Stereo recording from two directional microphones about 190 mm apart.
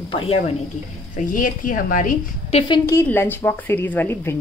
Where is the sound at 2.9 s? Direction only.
10° left (ahead or behind).